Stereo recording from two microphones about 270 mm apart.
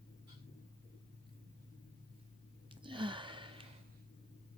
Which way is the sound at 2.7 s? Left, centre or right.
Centre.